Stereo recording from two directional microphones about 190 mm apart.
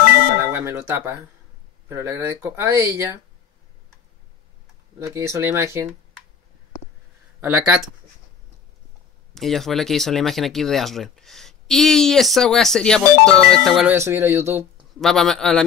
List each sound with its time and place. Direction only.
0.4 s music: 10° right (ahead or behind)
1.9 s speech: 15° right (ahead or behind)
5.1 s speech: 15° right (ahead or behind)
7.3 s speech: 10° right (ahead or behind)
9.3 s speech: centre (ahead or behind)
13.9 s speech: 15° right (ahead or behind)
15.0 s speech: centre (ahead or behind)